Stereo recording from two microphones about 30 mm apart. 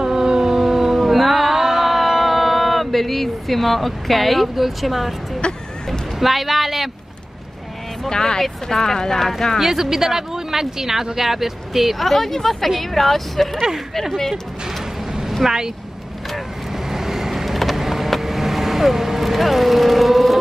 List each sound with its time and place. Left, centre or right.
0.0 s a sound: right
0.9 s music: centre
5.4 s vehicle: left
6.1 s speech: centre
8.1 s speech: left
9.6 s speech: centre
15.4 s speech: centre
16.9 s vehicle: centre